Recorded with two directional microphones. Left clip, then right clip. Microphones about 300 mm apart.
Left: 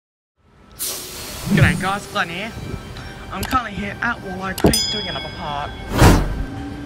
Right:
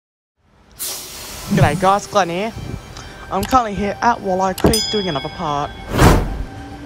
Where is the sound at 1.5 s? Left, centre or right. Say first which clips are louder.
Right 5 dB; centre.